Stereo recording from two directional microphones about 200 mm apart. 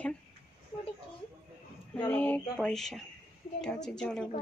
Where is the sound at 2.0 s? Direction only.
10° left (ahead or behind).